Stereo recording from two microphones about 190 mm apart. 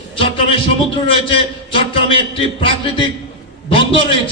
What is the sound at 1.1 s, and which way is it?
A man's voice, 30° left (ahead or behind).